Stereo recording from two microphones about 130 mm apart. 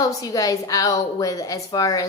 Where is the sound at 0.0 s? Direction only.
25° left (ahead or behind).